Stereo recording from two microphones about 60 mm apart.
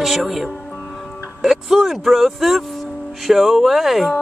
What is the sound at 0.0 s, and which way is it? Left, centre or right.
Speech, centre.